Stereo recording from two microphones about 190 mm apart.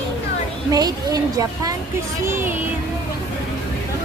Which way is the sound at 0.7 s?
20° right (ahead or behind).